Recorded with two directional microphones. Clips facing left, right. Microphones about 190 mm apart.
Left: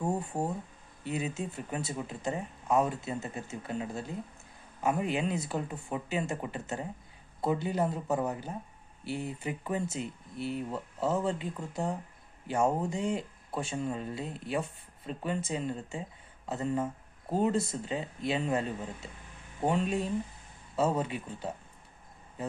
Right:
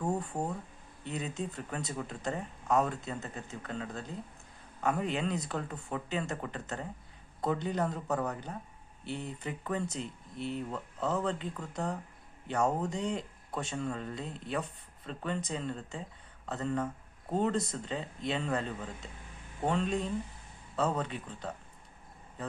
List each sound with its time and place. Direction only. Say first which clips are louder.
0.0 s speech: left 1 dB; 10° left (ahead or behind)
8.0 s speech: left 2 dB; 20° left (ahead or behind)
9.0 s speech: left 3 dB; 5° left (ahead or behind)
12.9 s speech: left 2 dB; 5° left (ahead or behind)
16.6 s a sound: left 2 dB; 15° left (ahead or behind)
17.3 s speech: left 2 dB; 5° left (ahead or behind)